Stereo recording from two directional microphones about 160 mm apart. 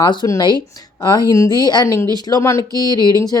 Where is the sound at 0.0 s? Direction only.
30° left (ahead or behind).